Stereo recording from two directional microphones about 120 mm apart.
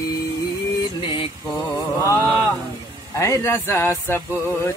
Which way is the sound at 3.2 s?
25° left (ahead or behind).